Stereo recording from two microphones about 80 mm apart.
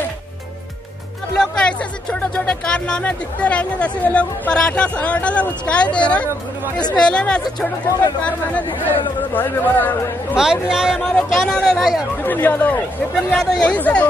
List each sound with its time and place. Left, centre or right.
1.4 s speech: centre
7.4 s speech: left
8.2 s speech: centre
10.3 s a man's voice: centre
11.3 s speech: centre
12.2 s speech: left